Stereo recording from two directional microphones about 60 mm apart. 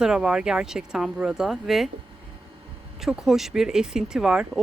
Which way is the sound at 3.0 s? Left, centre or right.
Centre.